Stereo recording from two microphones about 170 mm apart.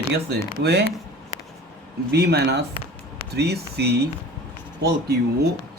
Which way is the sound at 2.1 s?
70° right (ahead or behind).